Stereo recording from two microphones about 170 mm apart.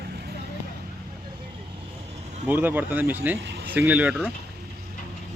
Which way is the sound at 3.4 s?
80° right.